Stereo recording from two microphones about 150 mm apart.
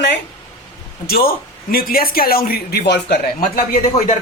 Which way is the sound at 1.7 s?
80° left.